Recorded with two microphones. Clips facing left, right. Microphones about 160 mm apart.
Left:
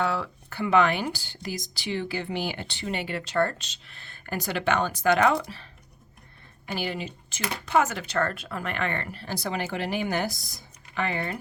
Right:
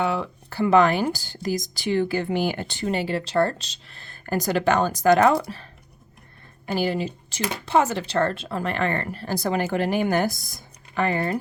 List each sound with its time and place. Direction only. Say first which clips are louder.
0.0 s speech: right 3 dB; 20° right (ahead or behind)
0.5 s speech: right 4 dB; 40° right (ahead or behind)
6.7 s speech: right 7 dB; 40° right (ahead or behind)